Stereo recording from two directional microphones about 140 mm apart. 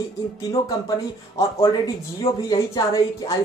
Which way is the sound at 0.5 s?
25° left (ahead or behind).